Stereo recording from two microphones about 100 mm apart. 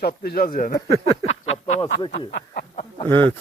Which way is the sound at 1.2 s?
90° left.